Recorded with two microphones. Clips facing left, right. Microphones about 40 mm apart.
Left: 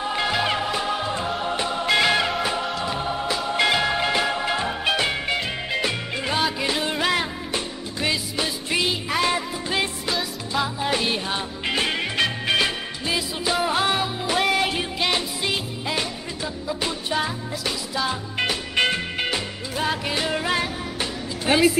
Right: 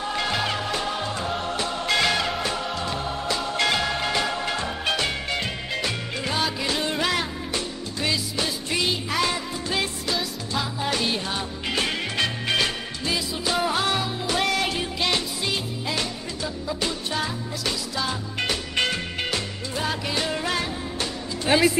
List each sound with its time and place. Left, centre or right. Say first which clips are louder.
0.0 s music: left 2 dB; centre
21.5 s music: left 1 dB; centre